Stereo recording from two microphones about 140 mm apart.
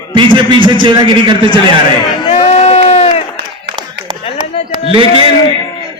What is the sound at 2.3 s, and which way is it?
Crowd, 45° left (ahead or behind).